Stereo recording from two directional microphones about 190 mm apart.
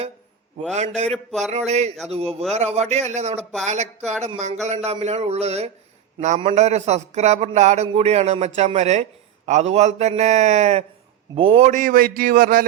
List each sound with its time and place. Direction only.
0.7 s a man's voice: 35° right (ahead or behind)
1.1 s a sound: 5° left (ahead or behind)
1.5 s a man's voice: 35° right (ahead or behind)